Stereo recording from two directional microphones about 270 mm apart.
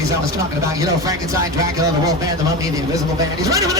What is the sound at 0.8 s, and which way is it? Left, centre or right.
Speech, centre.